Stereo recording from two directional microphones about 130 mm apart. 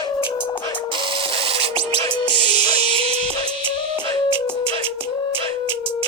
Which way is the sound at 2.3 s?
35° left (ahead or behind).